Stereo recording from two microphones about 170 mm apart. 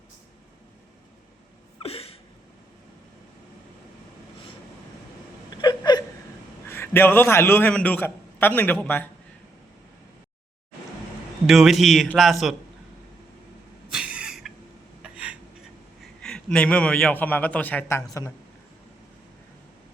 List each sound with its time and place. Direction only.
1.8 s a sound: 35° left (ahead or behind)
5.5 s whimper: 25° left (ahead or behind)
6.7 s a man's voice: 15° left (ahead or behind)
11.4 s a man's voice: centre (ahead or behind)
13.9 s a sound: 5° right (ahead or behind)
16.0 s a man's voice: 5° left (ahead or behind)